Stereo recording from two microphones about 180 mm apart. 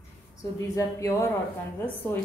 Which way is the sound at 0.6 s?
15° left (ahead or behind).